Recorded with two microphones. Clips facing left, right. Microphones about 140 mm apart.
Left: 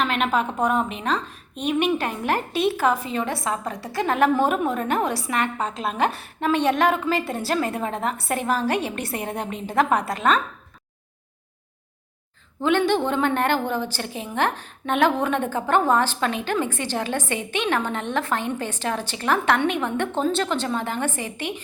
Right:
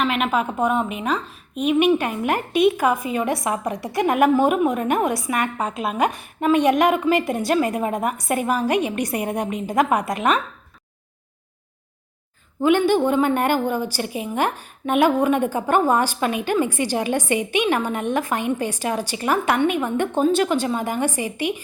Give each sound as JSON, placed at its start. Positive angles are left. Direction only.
{"t": 0.0, "sound": "a woman's voice", "side_deg": -5}
{"t": 12.6, "sound": "a woman's voice", "side_deg": -10}